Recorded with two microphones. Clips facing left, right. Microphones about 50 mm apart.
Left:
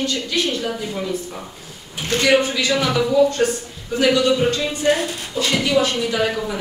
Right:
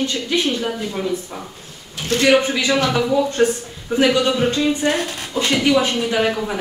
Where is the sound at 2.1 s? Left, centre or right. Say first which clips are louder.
Right 1 dB; right.